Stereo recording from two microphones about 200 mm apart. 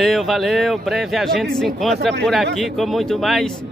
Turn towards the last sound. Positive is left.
turn(degrees=0)  # may be behind; listen again after turning